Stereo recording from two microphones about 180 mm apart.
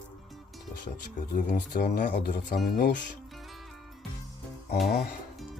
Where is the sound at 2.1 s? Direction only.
45° left (ahead or behind).